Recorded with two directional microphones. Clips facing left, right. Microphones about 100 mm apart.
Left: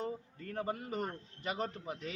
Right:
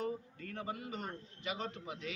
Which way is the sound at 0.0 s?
40° left (ahead or behind).